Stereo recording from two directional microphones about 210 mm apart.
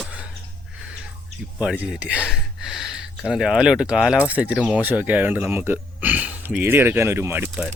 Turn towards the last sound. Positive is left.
turn(degrees=-5)  # may be behind; listen again after turning